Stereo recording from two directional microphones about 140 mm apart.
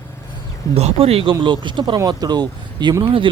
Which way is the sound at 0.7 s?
50° right (ahead or behind).